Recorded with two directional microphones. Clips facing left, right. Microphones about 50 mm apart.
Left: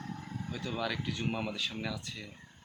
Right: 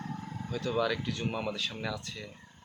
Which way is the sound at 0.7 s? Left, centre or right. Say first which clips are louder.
Right 5 dB; centre.